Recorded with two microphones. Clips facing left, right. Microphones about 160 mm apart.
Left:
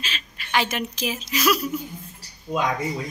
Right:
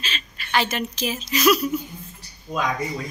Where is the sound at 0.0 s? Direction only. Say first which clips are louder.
Right 1 dB; 10° left (ahead or behind).